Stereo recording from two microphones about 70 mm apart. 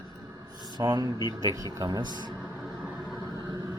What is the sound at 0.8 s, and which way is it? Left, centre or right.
Speech, right.